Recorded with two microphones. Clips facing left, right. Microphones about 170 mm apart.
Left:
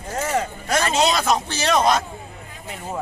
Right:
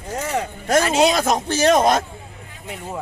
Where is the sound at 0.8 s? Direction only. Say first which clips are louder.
Right 2 dB; 10° right (ahead or behind).